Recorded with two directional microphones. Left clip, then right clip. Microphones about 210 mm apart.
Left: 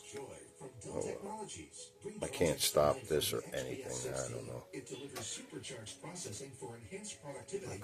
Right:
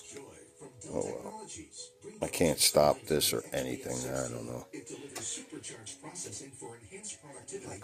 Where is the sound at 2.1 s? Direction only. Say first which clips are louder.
Right 5 dB; 35° right (ahead or behind).